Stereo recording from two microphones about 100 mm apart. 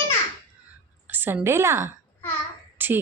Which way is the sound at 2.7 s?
20° right (ahead or behind).